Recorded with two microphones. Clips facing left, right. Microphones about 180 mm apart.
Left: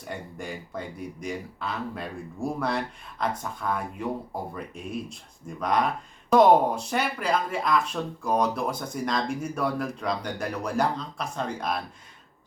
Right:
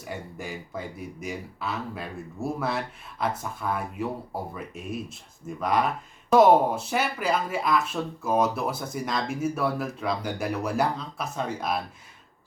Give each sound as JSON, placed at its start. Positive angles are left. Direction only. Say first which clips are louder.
{"t": 0.1, "sound": "speech", "louder": "even", "side_deg": -5}